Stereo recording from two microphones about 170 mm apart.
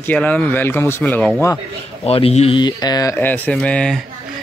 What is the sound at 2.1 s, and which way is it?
A man's voice, 35° left (ahead or behind).